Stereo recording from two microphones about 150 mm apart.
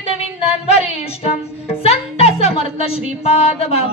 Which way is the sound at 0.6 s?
45° left (ahead or behind).